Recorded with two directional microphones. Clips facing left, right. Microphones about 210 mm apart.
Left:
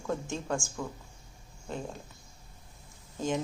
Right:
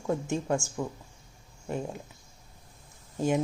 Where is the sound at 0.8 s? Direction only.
15° right (ahead or behind).